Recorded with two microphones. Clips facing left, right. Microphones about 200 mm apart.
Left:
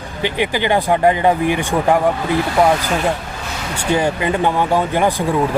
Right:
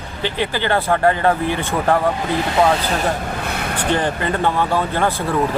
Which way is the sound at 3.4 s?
60° right (ahead or behind).